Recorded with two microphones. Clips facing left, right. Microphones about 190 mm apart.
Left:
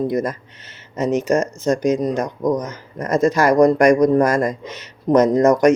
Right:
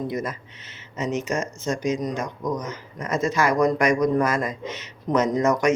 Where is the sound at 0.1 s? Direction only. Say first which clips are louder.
Left 7 dB; 40° left (ahead or behind).